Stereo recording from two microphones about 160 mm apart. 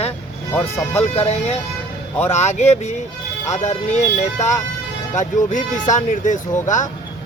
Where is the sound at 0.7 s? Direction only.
15° left (ahead or behind).